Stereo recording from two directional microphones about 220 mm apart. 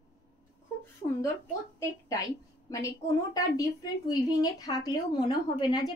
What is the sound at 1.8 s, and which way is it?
A woman's voice, 15° left (ahead or behind).